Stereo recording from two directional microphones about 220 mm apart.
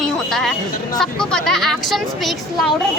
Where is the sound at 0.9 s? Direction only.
5° left (ahead or behind).